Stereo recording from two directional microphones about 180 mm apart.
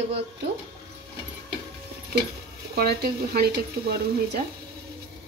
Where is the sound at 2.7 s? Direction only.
60° right (ahead or behind).